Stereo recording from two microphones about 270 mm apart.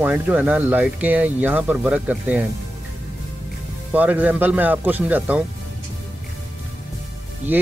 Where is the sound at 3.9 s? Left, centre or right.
Centre.